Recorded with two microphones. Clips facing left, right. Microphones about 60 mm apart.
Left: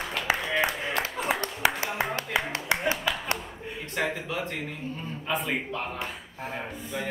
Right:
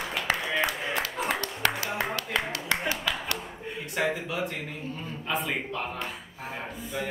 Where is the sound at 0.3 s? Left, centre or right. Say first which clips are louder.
Left 2 dB; centre.